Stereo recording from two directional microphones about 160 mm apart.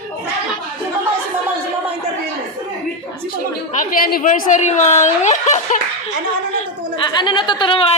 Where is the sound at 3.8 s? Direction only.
65° left (ahead or behind); by 5.7 s 45° left (ahead or behind).